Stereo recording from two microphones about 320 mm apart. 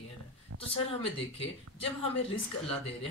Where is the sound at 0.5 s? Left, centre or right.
Right.